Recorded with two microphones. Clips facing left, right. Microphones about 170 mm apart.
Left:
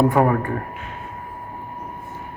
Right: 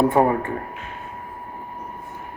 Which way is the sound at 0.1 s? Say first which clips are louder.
Even; 25° right (ahead or behind).